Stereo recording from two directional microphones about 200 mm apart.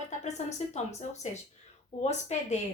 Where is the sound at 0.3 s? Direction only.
35° left (ahead or behind).